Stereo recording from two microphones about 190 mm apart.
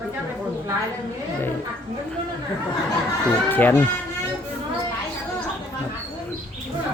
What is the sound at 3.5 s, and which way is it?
Speech, 10° left (ahead or behind).